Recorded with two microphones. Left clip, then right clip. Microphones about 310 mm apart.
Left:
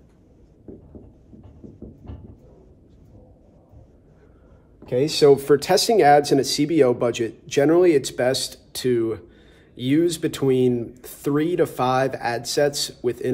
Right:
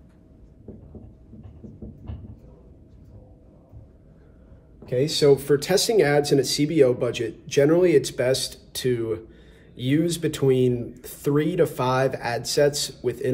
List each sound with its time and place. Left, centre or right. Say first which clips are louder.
4.8 s speech: left 3 dB; left